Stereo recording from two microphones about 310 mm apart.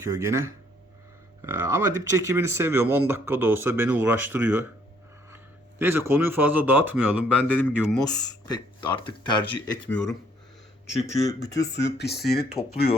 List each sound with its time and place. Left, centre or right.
0.0 s speech: centre
5.8 s a man's voice: centre
8.0 s speech: centre
11.1 s speech: right
11.7 s speech: left